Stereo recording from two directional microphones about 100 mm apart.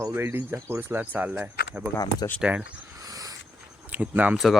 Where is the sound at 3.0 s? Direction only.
40° right (ahead or behind).